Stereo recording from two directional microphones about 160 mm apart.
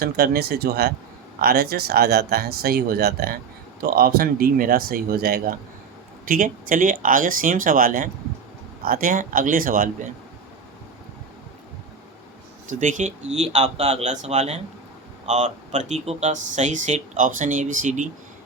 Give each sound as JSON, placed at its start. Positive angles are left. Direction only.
{"t": 0.0, "sound": "speech", "side_deg": -80}
{"t": 6.2, "sound": "speech", "side_deg": -60}
{"t": 12.8, "sound": "speech", "side_deg": -50}